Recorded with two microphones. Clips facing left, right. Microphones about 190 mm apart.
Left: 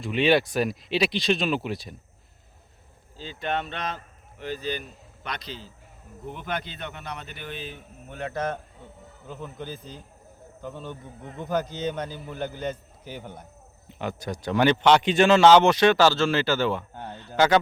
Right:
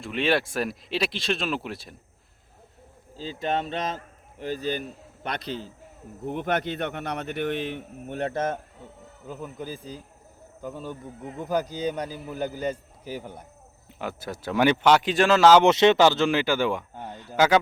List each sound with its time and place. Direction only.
0.0 s speech: centre (ahead or behind)
3.2 s speech: 35° right (ahead or behind); by 8.1 s 70° right (ahead or behind)
8.2 s speech: 25° right (ahead or behind)
9.2 s a man's voice: 5° right (ahead or behind)
15.6 s a man's voice: 20° right (ahead or behind)